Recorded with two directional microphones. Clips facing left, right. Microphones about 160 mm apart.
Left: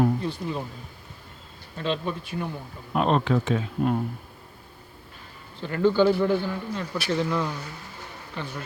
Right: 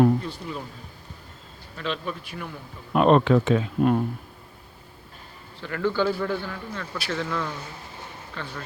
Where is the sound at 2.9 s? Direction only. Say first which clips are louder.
Right 5 dB; 65° right (ahead or behind).